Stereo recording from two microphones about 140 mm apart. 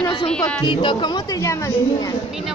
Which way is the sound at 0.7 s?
35° left (ahead or behind).